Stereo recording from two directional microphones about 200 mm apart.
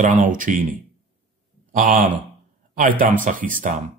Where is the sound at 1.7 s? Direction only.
40° right (ahead or behind).